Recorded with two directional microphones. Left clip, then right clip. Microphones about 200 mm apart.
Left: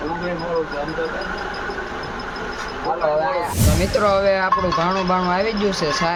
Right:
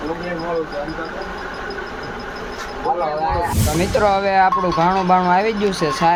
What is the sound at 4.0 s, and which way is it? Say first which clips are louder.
Speech: right 3 dB; 25° right (ahead or behind).